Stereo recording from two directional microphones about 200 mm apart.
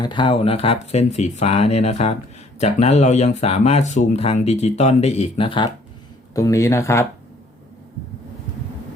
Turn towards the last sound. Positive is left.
turn(degrees=15)  # may be behind; listen again after turning